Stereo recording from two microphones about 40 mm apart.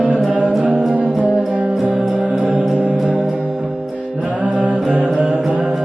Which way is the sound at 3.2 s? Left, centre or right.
Centre.